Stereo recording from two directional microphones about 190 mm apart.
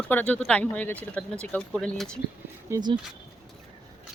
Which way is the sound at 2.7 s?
15° right (ahead or behind).